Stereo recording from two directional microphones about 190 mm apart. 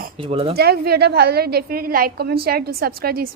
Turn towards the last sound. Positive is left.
turn(degrees=-55)  # may be behind; listen again after turning